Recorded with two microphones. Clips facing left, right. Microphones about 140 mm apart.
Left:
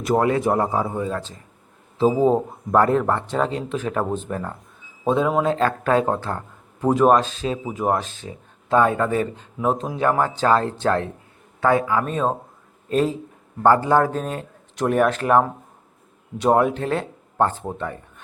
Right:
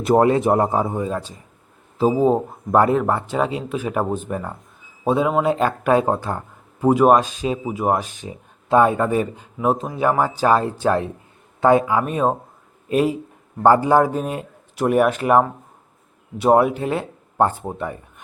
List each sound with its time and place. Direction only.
0.0 s a man's voice: 30° right (ahead or behind); by 18.0 s 15° right (ahead or behind)